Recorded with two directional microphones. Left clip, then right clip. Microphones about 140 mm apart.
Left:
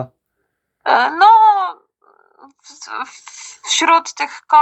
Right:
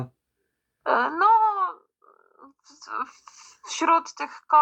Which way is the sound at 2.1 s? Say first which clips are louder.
Left 6 dB; 60° left (ahead or behind).